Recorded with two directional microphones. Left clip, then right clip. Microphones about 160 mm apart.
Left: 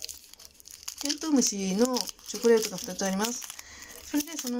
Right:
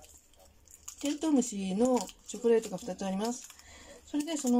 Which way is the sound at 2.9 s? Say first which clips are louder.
Left 4 dB; 15° right (ahead or behind).